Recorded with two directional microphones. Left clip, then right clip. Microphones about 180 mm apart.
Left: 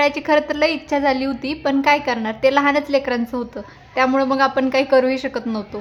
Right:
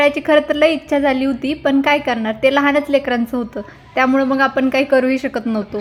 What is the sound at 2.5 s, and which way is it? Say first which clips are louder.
A woman's voice: right 2 dB; 15° right (ahead or behind).